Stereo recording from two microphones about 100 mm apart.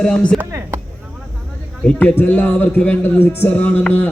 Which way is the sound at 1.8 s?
10° left (ahead or behind).